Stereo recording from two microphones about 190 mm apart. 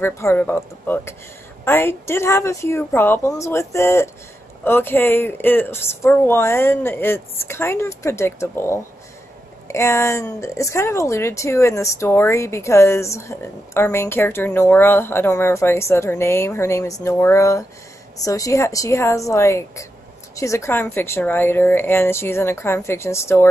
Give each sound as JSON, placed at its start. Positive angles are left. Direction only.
{"t": 0.0, "sound": "speech", "side_deg": 15}